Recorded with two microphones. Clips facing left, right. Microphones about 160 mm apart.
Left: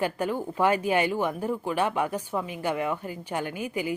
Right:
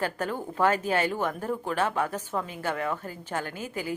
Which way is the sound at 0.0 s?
10° left (ahead or behind).